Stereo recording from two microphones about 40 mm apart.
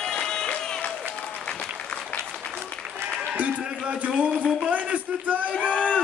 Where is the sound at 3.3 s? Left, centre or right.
Right.